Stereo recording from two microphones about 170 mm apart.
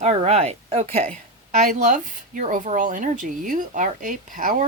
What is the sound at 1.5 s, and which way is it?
Speech, 45° right (ahead or behind).